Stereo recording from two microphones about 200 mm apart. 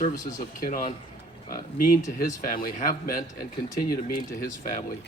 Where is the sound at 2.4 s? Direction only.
45° left (ahead or behind).